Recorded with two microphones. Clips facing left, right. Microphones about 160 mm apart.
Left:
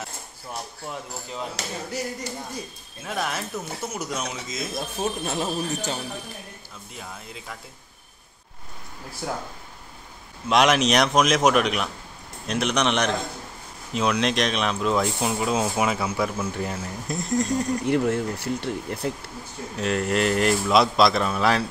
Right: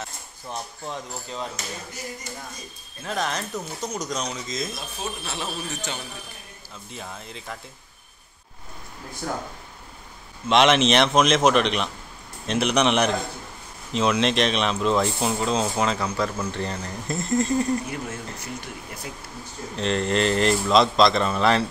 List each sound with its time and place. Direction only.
0.5 s speech: 10° left (ahead or behind)
3.0 s speech: 5° left (ahead or behind)
4.7 s speech: 50° left (ahead or behind)
7.0 s speech: 5° left (ahead or behind)
9.2 s speech: 10° left (ahead or behind)
10.5 s speech: centre (ahead or behind)
17.8 s speech: 65° left (ahead or behind)
19.7 s speech: 5° left (ahead or behind)